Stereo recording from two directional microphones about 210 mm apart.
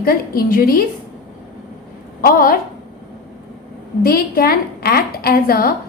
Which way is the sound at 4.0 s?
45° left (ahead or behind).